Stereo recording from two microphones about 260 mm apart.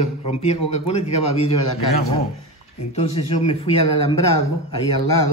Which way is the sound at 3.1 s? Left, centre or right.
Left.